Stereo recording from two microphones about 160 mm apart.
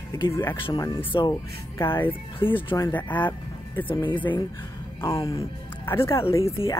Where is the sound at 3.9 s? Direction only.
30° left (ahead or behind).